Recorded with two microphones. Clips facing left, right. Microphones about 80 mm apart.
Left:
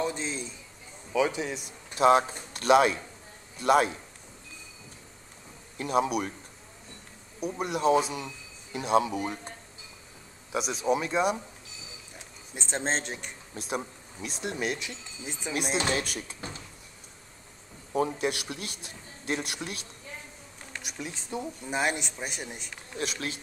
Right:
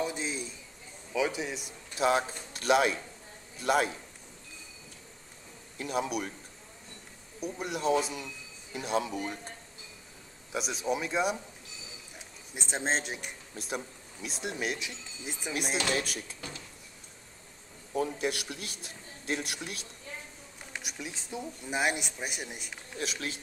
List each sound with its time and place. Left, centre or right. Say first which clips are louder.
0.0 s a sound: left 2 dB; centre
1.1 s speech: left 4 dB; centre
5.8 s speech: left 5 dB; centre
7.6 s speech: left 4 dB; centre
10.5 s speech: left 4 dB; centre
12.5 s speech: left 1 dB; centre
16.3 s speech: left 3 dB; left
18.1 s a man's voice: left 2 dB; centre